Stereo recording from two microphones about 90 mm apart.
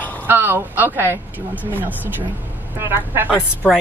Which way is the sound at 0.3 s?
20° right (ahead or behind).